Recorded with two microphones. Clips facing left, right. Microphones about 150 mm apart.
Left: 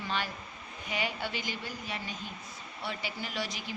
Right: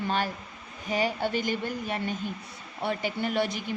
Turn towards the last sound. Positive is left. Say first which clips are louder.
# right 9 dB
turn(degrees=-55)  # may be behind; listen again after turning